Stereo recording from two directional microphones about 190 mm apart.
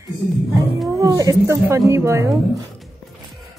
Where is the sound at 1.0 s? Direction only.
20° right (ahead or behind).